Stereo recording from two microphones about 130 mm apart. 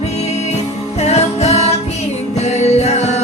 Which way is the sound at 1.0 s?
60° left (ahead or behind).